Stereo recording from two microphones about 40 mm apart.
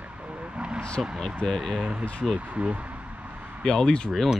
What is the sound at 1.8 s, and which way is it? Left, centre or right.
Speech, right.